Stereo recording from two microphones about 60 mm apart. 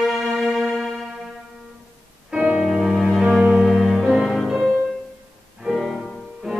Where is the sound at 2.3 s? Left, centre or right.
Right.